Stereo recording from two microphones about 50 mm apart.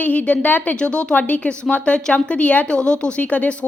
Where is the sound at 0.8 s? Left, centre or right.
Left.